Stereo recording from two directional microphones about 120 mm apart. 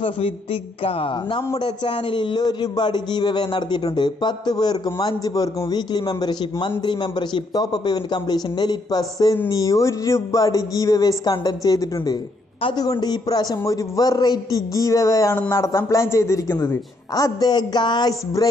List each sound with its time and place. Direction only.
0.0 s a man's voice: 50° left (ahead or behind); by 15.3 s 25° left (ahead or behind)
15.3 s a woman's voice: 15° left (ahead or behind); by 18.5 s 30° left (ahead or behind)